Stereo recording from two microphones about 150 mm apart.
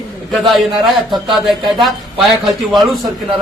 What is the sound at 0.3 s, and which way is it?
A man's voice, centre (ahead or behind).